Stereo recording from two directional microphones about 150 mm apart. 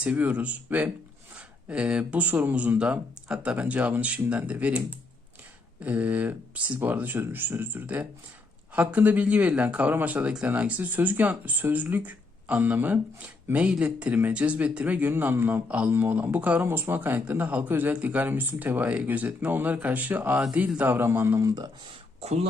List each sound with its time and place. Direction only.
0.0 s speech: 10° right (ahead or behind)
22.2 s speech: 45° right (ahead or behind)